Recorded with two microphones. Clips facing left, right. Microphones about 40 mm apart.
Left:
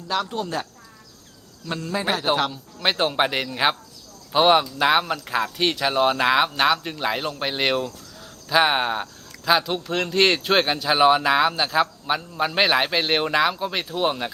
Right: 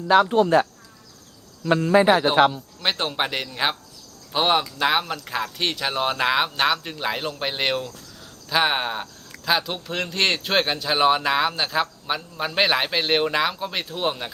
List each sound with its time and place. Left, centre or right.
0.1 s speech: right
2.3 s speech: centre